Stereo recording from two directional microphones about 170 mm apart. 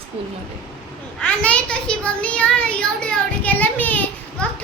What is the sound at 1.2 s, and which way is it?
A child's voice, 5° left (ahead or behind).